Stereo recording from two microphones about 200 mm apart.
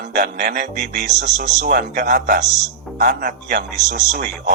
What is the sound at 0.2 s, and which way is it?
Speech, 50° right (ahead or behind).